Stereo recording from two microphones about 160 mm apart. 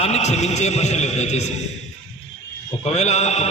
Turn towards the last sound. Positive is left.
turn(degrees=45)  # may be behind; listen again after turning